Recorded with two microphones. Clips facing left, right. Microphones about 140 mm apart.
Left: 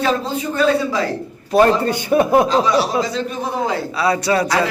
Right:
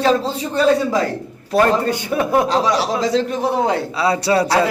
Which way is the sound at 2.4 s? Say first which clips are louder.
Left 1 dB; 90° right.